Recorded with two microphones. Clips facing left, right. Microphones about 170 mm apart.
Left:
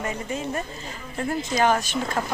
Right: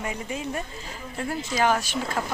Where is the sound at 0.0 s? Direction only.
10° right (ahead or behind).